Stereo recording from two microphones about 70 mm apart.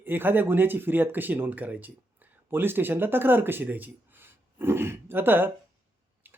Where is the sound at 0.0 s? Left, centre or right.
Right.